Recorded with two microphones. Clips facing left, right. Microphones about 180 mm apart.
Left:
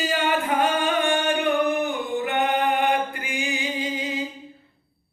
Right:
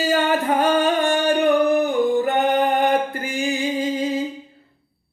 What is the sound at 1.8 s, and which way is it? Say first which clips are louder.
Yodeling: right 7 dB; 40° right (ahead or behind).